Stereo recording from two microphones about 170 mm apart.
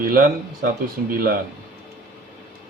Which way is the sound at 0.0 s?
55° right (ahead or behind).